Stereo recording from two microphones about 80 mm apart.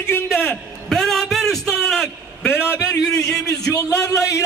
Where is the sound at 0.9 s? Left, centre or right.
Centre.